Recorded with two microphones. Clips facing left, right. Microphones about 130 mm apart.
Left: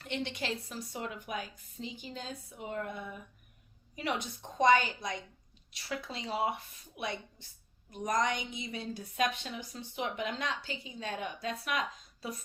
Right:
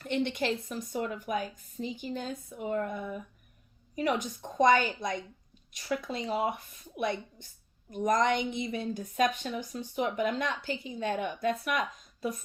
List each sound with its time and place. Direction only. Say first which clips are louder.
0.0 s a woman's voice: right 7 dB; 50° right (ahead or behind)